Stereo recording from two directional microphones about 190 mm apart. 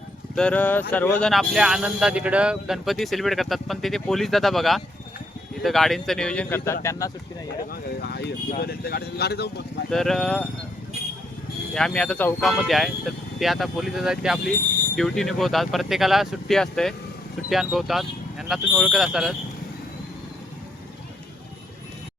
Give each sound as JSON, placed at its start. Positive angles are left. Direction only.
{"t": 0.3, "sound": "speech", "side_deg": 5}
{"t": 7.7, "sound": "speech", "side_deg": 55}
{"t": 9.9, "sound": "speech", "side_deg": 0}
{"t": 11.7, "sound": "speech", "side_deg": 5}